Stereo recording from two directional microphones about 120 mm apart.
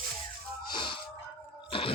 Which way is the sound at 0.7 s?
40° left (ahead or behind).